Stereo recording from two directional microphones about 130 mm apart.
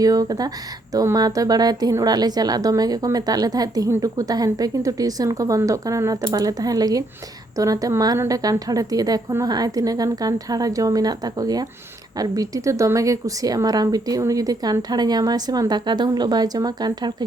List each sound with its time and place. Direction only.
0.0 s a woman's voice: 30° right (ahead or behind)